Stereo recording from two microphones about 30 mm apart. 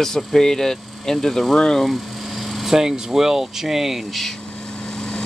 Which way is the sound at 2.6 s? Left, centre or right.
Centre.